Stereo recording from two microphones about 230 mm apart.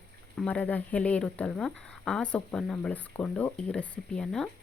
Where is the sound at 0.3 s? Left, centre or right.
Centre.